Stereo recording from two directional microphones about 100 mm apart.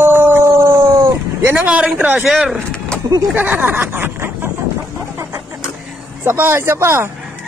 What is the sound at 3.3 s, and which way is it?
Speech, 20° right (ahead or behind).